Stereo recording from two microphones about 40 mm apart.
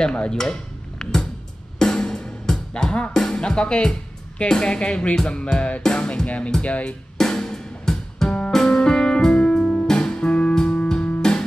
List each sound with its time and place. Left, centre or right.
0.0 s speech: left
1.8 s music: centre
3.1 s speech: centre
5.8 s music: centre
6.2 s speech: left
7.2 s music: centre